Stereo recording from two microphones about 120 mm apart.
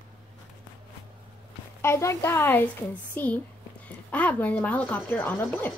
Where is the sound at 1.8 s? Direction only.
20° left (ahead or behind).